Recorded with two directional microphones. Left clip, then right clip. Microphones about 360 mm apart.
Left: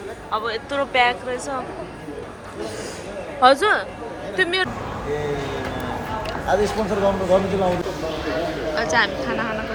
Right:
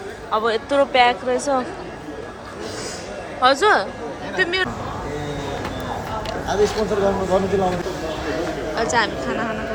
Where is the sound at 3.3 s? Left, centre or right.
Centre.